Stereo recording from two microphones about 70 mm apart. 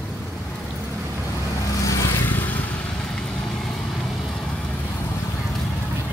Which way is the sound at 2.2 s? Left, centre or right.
Left.